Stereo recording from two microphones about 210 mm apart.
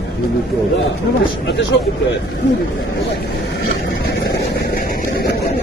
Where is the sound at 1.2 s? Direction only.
60° left (ahead or behind).